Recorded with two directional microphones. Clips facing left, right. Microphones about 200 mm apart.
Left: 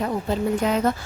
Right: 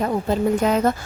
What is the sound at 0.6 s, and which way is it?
Speech, 45° right (ahead or behind).